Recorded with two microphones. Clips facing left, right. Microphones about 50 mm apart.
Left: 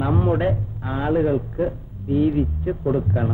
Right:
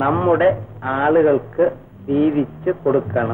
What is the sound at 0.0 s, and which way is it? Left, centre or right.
A man's voice, right.